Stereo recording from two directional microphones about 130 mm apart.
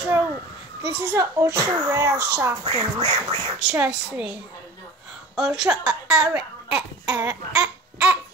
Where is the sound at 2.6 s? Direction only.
55° right (ahead or behind).